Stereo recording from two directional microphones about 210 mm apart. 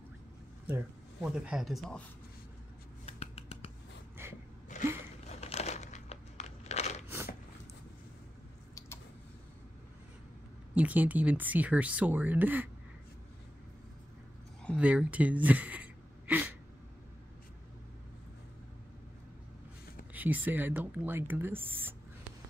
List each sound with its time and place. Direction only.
0.7 s speech: 5° right (ahead or behind)
3.1 s finger snapping: 30° left (ahead or behind)
4.2 s gasp: 10° right (ahead or behind)
5.2 s crushing: 30° left (ahead or behind)
8.7 s a sound: 10° left (ahead or behind)
10.7 s speech: 5° right (ahead or behind)
14.8 s speech: 5° right (ahead or behind)
20.1 s speech: 10° right (ahead or behind)